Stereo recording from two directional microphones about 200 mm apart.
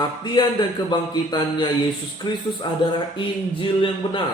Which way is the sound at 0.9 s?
20° left (ahead or behind).